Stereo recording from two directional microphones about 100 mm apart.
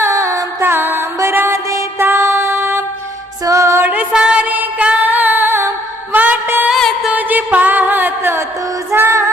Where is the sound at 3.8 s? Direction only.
15° right (ahead or behind).